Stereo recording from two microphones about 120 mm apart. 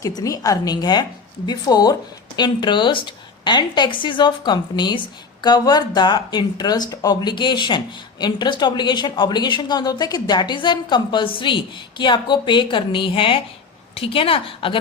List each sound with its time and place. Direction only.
0.2 s a woman's voice: 30° left (ahead or behind); by 14.8 s 50° left (ahead or behind)